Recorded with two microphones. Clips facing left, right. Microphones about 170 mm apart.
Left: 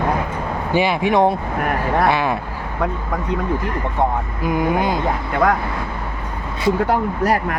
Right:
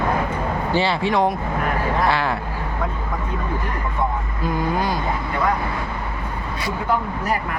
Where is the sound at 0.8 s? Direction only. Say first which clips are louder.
Left 4 dB; 15° left (ahead or behind).